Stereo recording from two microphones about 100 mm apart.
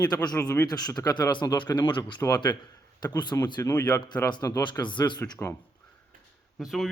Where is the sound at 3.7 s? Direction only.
25° left (ahead or behind).